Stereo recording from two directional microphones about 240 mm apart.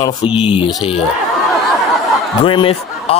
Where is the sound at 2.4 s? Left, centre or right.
Left.